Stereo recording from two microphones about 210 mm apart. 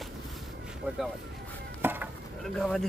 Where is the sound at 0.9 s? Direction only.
5° right (ahead or behind).